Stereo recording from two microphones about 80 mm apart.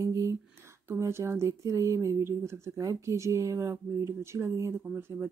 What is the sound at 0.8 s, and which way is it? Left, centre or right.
Speech, right.